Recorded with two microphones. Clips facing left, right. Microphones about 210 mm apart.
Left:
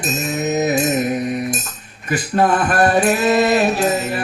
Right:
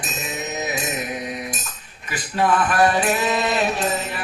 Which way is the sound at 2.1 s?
45° left (ahead or behind).